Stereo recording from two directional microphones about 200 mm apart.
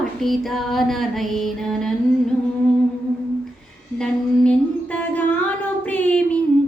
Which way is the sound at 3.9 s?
5° left (ahead or behind).